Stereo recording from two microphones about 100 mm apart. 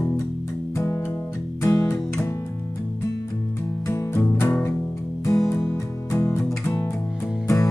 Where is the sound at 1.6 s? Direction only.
25° left (ahead or behind).